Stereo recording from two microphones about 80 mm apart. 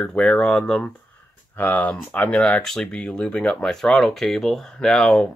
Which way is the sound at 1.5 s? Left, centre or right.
Left.